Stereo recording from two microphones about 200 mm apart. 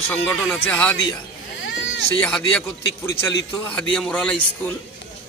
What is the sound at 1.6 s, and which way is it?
Baby cry, 70° left (ahead or behind).